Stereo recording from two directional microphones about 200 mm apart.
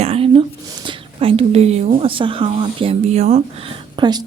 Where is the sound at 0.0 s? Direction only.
30° right (ahead or behind).